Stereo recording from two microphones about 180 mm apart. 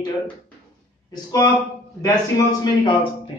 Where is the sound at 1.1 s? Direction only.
25° left (ahead or behind).